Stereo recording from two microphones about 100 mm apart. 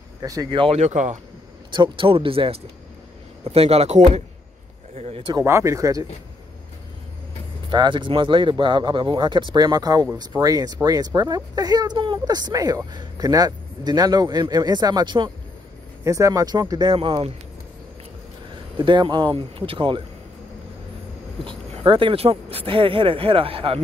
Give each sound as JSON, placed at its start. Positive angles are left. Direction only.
{"t": 0.2, "sound": "speech", "side_deg": -35}
{"t": 0.5, "sound": "speech", "side_deg": -60}
{"t": 3.4, "sound": "speech", "side_deg": -85}
{"t": 5.4, "sound": "speech", "side_deg": -30}
{"t": 7.7, "sound": "speech", "side_deg": -50}
{"t": 16.0, "sound": "speech", "side_deg": -35}
{"t": 18.8, "sound": "speech", "side_deg": -50}
{"t": 19.3, "sound": "speech", "side_deg": -65}
{"t": 21.5, "sound": "speech", "side_deg": -55}